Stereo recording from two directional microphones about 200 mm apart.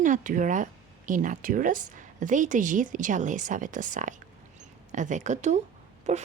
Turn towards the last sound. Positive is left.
turn(degrees=-35)  # may be behind; listen again after turning